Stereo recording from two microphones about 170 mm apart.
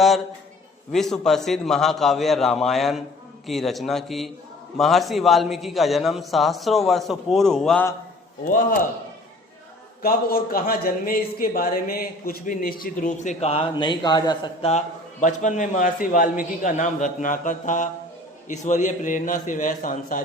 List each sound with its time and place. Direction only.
0.9 s a man's voice: 5° left (ahead or behind)
8.4 s a man's voice: 55° left (ahead or behind)
10.0 s a man's voice: 60° left (ahead or behind); by 14.5 s 25° left (ahead or behind)
14.6 s a man's voice: 40° left (ahead or behind)